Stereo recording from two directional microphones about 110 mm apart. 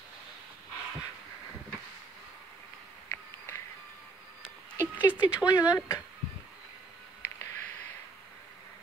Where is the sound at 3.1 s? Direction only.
25° left (ahead or behind).